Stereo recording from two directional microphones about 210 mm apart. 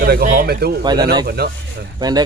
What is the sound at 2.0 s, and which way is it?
Speech, 20° right (ahead or behind).